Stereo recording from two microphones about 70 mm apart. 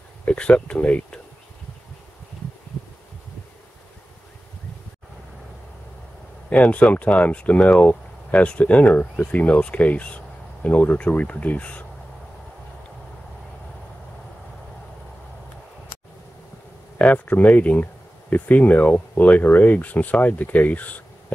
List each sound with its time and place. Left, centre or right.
0.2 s speech: centre
6.5 s speech: centre
17.0 s speech: left